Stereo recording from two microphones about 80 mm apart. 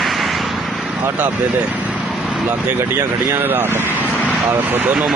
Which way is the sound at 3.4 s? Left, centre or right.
Right.